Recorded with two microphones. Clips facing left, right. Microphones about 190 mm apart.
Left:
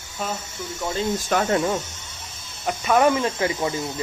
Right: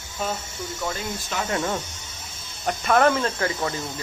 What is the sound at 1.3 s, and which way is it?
Speech, 55° left (ahead or behind).